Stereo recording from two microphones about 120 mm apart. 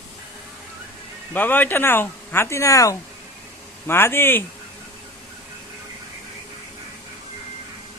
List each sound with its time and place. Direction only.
1.3 s speech: 15° left (ahead or behind)